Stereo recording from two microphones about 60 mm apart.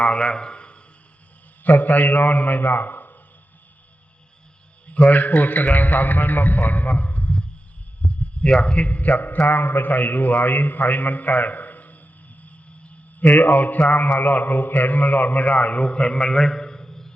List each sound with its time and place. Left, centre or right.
0.0 s a man's voice: centre
1.6 s a man's voice: left
4.9 s a man's voice: left
8.0 s a sound: centre
8.6 s a man's voice: centre
13.4 s a man's voice: left
16.2 s a sound: centre